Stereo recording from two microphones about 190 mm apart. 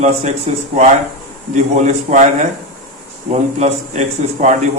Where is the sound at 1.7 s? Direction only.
40° right (ahead or behind).